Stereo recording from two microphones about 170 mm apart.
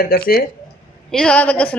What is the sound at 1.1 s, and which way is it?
Speech, 5° left (ahead or behind).